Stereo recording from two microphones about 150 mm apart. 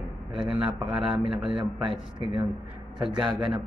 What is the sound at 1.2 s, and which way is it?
Speech, 35° right (ahead or behind).